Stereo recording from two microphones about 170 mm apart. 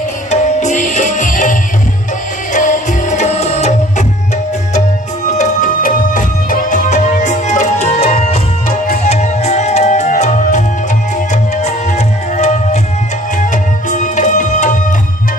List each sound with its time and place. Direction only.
0.3 s music: 45° left (ahead or behind)
5.4 s music: 50° left (ahead or behind)
12.4 s music: 45° left (ahead or behind)